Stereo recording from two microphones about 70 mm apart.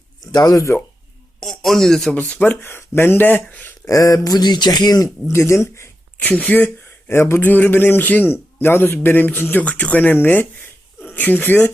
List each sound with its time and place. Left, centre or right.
0.3 s speech: left
1.4 s speech: centre
2.1 s speech: centre
2.6 s speech: left
3.8 s speech: left
5.3 s speech: left
6.1 s a man's voice: centre
7.1 s a man's voice: left